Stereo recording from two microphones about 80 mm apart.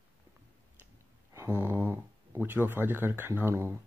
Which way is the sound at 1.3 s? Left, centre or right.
Right.